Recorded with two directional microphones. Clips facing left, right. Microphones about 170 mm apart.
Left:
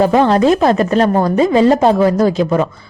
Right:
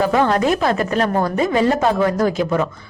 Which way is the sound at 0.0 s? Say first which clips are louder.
Left 5 dB; 30° left (ahead or behind).